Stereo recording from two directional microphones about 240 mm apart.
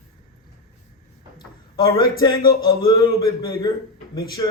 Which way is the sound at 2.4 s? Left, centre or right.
Left.